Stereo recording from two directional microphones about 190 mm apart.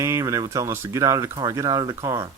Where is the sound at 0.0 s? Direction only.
15° right (ahead or behind).